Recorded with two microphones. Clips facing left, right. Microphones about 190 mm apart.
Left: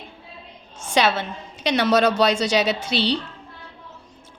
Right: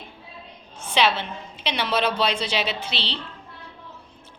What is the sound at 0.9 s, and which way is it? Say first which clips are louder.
Speech: left 2 dB; 45° left (ahead or behind).